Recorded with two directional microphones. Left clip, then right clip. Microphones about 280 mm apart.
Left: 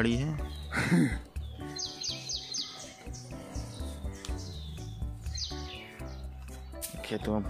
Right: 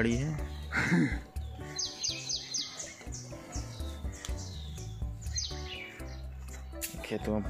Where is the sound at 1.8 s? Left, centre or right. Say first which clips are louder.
Right 2 dB; centre.